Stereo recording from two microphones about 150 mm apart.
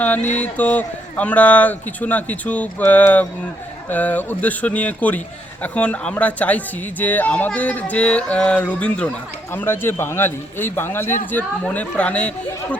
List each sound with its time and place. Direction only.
0.0 s speech: 10° left (ahead or behind)